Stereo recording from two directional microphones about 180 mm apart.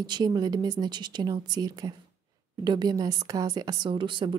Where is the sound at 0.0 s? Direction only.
25° right (ahead or behind).